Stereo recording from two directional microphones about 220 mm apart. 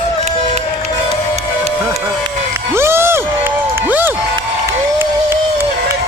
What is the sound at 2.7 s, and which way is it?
Crowd, 10° right (ahead or behind).